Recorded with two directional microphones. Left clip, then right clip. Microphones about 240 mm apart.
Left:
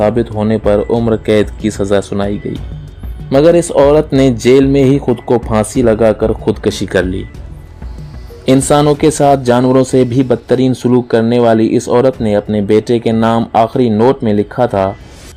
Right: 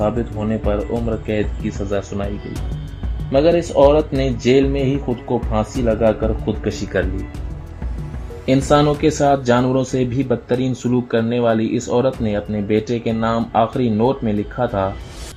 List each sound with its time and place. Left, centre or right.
0.0 s speech: left
8.4 s speech: left